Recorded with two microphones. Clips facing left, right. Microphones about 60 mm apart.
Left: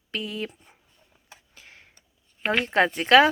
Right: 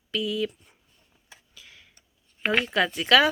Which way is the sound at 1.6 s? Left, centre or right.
Left.